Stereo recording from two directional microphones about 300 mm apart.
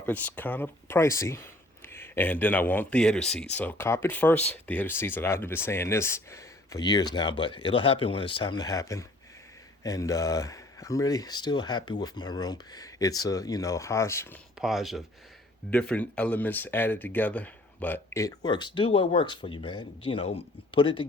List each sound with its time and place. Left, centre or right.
0.0 s speech: centre